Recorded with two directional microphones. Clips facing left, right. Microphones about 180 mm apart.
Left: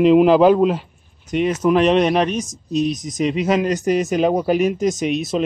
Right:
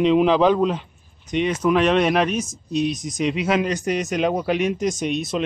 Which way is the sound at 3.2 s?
Centre (ahead or behind).